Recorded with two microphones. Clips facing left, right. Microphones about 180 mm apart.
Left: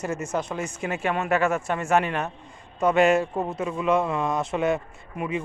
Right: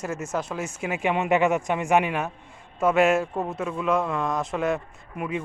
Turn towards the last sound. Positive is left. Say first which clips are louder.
# left 1 dB
turn(degrees=0)  # may be behind; listen again after turning